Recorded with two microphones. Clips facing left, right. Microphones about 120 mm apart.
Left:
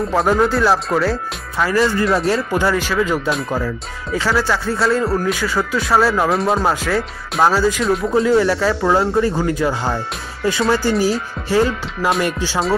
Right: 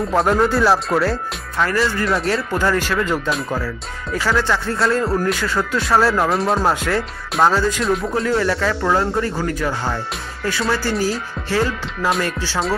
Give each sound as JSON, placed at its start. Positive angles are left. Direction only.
{"t": 0.1, "sound": "a man's voice", "side_deg": 0}
{"t": 3.4, "sound": "a man's voice", "side_deg": 15}